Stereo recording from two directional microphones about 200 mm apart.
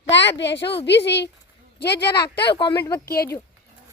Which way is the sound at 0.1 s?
65° left (ahead or behind).